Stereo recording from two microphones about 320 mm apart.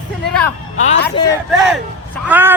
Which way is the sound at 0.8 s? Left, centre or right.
Left.